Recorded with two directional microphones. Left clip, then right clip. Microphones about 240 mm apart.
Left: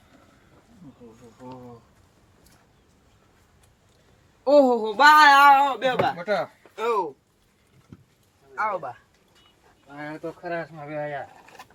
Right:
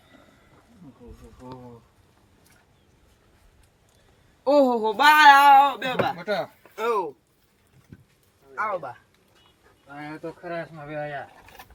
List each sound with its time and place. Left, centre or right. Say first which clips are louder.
1.4 s speech: left 1 dB; centre
4.4 s speech: left 2 dB; right
6.1 s speech: left 2 dB; centre
6.6 s a sound: even; centre
8.5 s speech: left 1 dB; centre